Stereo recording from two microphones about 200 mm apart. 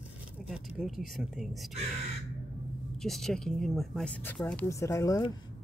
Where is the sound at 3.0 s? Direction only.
Centre (ahead or behind).